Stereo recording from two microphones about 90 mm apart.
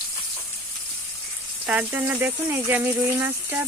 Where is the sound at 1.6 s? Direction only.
20° right (ahead or behind).